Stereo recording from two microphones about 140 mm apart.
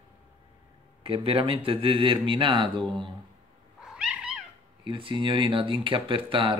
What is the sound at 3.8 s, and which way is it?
Cat, 5° right (ahead or behind).